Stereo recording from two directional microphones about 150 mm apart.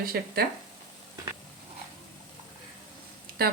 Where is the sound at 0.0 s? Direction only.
90° right.